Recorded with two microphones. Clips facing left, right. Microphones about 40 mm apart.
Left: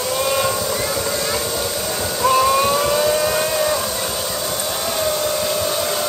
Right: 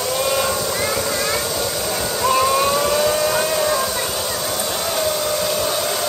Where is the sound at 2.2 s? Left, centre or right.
Centre.